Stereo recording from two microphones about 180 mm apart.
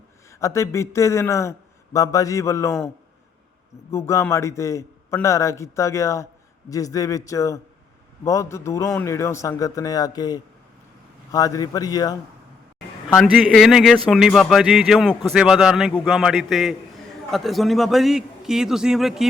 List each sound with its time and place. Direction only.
0.3 s a man's voice: 15° left (ahead or behind)
3.9 s a man's voice: 15° left (ahead or behind)
13.1 s speech: centre (ahead or behind)